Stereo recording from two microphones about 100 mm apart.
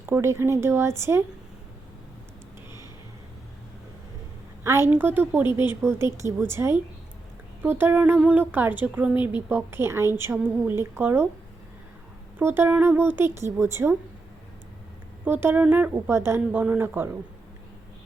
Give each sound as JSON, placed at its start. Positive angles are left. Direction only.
{"t": 0.0, "sound": "speech", "side_deg": -25}
{"t": 4.6, "sound": "a woman's voice", "side_deg": -25}
{"t": 5.5, "sound": "speech", "side_deg": 50}
{"t": 5.8, "sound": "speech", "side_deg": -25}
{"t": 12.4, "sound": "speech", "side_deg": -20}
{"t": 15.2, "sound": "speech", "side_deg": -20}
{"t": 16.0, "sound": "speech", "side_deg": -25}